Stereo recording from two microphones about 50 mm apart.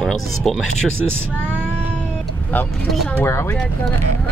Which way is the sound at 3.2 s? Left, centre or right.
Left.